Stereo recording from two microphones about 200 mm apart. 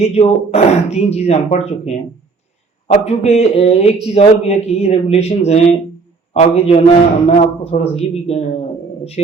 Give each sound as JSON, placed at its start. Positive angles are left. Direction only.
{"t": 0.0, "sound": "speech", "side_deg": 30}